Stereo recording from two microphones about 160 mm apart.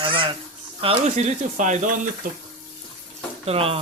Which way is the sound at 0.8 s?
40° right (ahead or behind).